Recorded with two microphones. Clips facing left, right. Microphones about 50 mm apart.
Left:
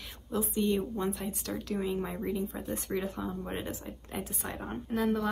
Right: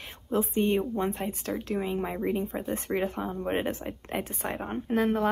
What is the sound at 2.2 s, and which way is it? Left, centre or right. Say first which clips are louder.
Speech: right 5 dB; right.